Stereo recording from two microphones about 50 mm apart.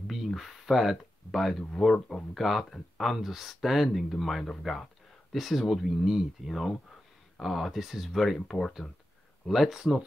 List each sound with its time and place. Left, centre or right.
0.0 s a sound: centre
2.0 s speech: left
2.3 s speech: centre
8.8 s speech: left
9.5 s speech: centre